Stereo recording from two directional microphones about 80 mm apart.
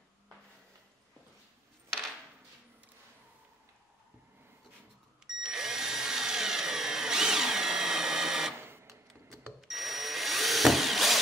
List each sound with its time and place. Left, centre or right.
5.2 s tools: centre
8.6 s a sound: right
9.6 s drill: centre